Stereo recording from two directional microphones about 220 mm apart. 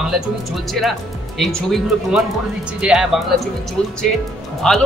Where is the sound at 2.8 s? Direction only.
5° right (ahead or behind).